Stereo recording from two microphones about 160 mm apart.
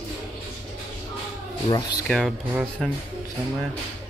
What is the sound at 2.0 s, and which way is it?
Speech, 5° left (ahead or behind).